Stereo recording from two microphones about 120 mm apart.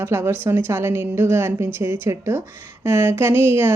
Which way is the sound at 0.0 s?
20° right (ahead or behind).